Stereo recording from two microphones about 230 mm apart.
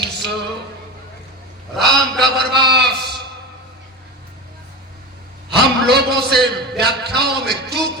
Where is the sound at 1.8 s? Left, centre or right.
Centre.